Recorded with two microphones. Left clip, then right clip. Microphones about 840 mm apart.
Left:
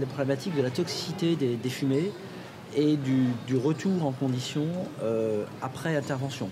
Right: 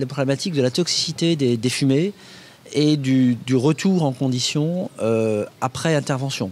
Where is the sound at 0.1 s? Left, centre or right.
Right.